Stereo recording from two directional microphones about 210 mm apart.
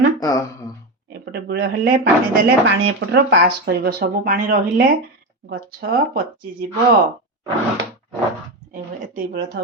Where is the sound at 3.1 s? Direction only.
50° right (ahead or behind).